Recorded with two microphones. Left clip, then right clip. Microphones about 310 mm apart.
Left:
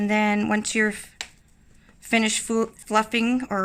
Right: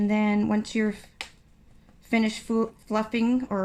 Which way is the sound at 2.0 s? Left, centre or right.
Left.